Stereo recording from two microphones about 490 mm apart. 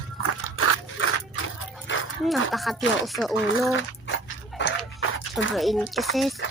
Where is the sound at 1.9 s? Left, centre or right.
Left.